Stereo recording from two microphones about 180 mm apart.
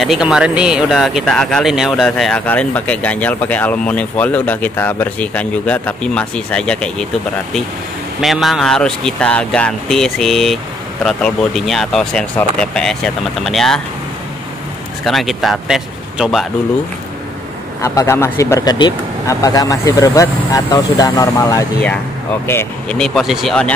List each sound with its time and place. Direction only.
0.0 s speech: 5° right (ahead or behind)
8.2 s speech: centre (ahead or behind)
15.0 s speech: centre (ahead or behind)
17.8 s speech: 15° left (ahead or behind)
22.9 s speech: centre (ahead or behind)